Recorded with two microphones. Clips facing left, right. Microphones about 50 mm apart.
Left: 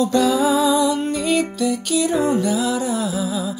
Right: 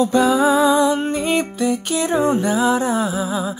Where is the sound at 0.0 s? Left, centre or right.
Right.